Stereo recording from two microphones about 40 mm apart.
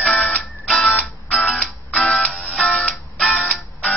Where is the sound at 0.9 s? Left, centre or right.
Left.